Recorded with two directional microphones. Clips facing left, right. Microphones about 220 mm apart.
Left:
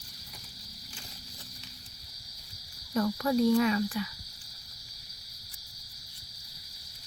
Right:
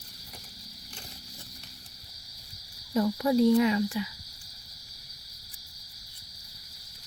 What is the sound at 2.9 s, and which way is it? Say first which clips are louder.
Cricket: right 3 dB; 15° right (ahead or behind).